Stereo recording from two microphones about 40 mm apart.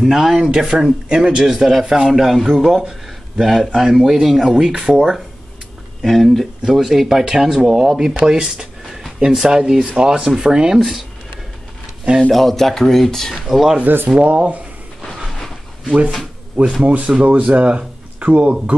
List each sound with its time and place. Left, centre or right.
0.1 s a man's voice: centre
4.8 s speech: right
6.0 s a man's voice: centre
9.8 s a man's voice: right; by 11.1 s centre
12.3 s speech: centre
13.3 s a man's voice: centre
14.0 s speech: right
15.0 s a sound: centre
16.8 s speech: right